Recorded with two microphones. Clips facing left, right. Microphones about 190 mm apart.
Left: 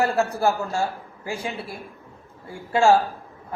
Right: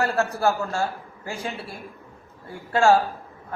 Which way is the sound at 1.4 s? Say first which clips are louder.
Left 1 dB; 15° left (ahead or behind).